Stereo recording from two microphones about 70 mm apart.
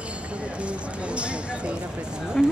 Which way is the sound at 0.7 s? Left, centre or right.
Centre.